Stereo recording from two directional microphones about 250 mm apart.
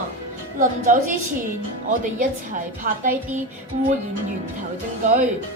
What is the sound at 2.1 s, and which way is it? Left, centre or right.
A woman's voice, right.